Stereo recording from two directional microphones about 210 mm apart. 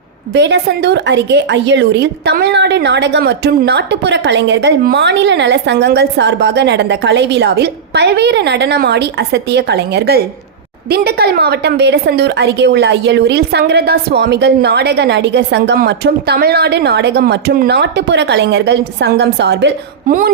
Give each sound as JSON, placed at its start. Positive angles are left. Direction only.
{"t": 0.3, "sound": "a woman's voice", "side_deg": -55}
{"t": 20.1, "sound": "speech", "side_deg": -40}